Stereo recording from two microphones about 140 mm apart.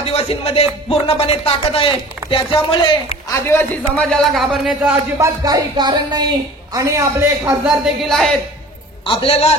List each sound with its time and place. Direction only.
0.0 s music: 45° left (ahead or behind)
0.8 s speech: 45° left (ahead or behind)
3.3 s a man's voice: 20° left (ahead or behind); by 4.9 s 5° right (ahead or behind)
5.2 s speech: 25° right (ahead or behind)
7.6 s a man's voice: centre (ahead or behind)
9.0 s speech: 40° left (ahead or behind)